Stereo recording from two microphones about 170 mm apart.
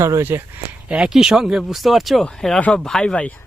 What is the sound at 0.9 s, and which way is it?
Speech, 5° right (ahead or behind).